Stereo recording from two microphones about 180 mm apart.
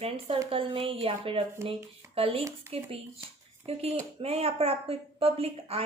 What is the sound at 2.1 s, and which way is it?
Speech, 30° right (ahead or behind).